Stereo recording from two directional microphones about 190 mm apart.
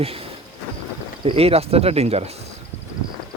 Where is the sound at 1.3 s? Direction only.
30° right (ahead or behind).